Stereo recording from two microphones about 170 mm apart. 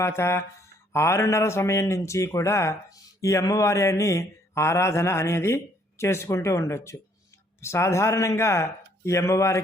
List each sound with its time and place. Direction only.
0.0 s a man's voice: 15° left (ahead or behind)